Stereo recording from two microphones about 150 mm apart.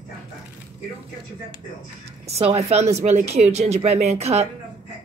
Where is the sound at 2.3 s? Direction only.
45° right (ahead or behind).